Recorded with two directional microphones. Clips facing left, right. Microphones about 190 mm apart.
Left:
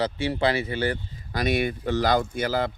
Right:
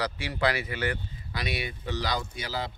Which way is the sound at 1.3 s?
45° left (ahead or behind).